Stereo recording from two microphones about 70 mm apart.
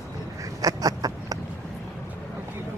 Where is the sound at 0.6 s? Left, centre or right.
Right.